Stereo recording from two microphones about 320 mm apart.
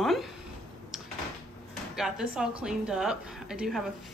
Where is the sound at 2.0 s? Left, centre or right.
Centre.